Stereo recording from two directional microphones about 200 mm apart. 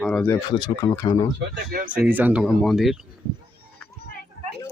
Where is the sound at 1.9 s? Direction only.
10° right (ahead or behind).